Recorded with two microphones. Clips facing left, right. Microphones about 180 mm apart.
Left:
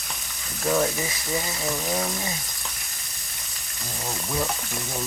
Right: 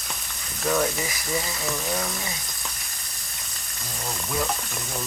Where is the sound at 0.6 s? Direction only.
20° left (ahead or behind).